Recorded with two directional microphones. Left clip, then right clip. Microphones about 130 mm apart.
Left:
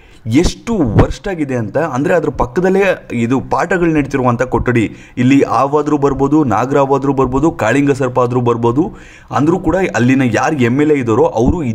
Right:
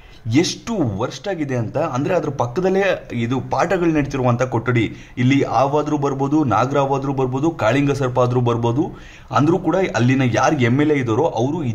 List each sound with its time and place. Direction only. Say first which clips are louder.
0.3 s speech: left 5 dB; 35° left (ahead or behind)
3.6 s speech: left 4 dB; 35° left (ahead or behind)
4.4 s speech: left 5 dB; 45° left (ahead or behind)